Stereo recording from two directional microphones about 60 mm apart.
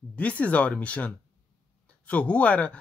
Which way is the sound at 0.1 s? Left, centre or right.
Left.